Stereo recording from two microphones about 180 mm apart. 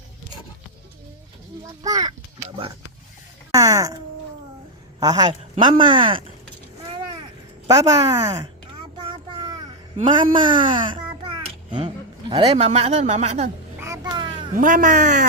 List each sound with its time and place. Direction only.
1.8 s speech: 20° right (ahead or behind)
3.5 s speech: 20° right (ahead or behind)
4.9 s speech: 20° right (ahead or behind)
7.7 s speech: 20° right (ahead or behind)
9.0 s child singing: 25° right (ahead or behind)
10.0 s a child's voice: 25° right (ahead or behind)
12.3 s speech: 35° right (ahead or behind)
13.7 s a sound: 15° right (ahead or behind)
14.5 s speech: 45° right (ahead or behind)